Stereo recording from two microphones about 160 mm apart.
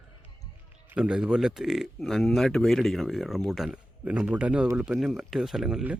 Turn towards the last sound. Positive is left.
turn(degrees=-5)  # may be behind; listen again after turning